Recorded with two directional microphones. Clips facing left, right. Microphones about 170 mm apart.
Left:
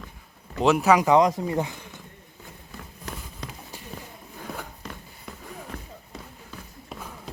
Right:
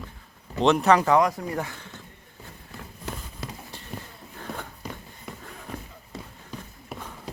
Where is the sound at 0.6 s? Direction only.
5° left (ahead or behind).